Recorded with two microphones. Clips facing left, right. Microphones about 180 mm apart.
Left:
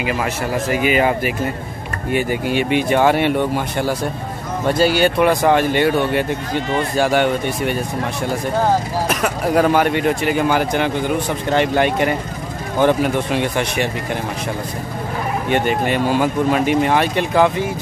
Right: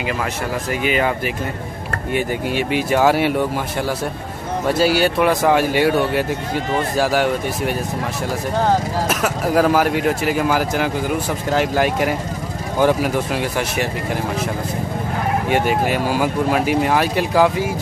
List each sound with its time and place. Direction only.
0.7 s speech: 5° left (ahead or behind)
9.1 s speech: centre (ahead or behind)
15.5 s speech: 5° right (ahead or behind)